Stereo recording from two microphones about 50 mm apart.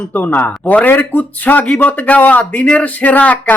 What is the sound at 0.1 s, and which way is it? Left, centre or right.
Speech, left.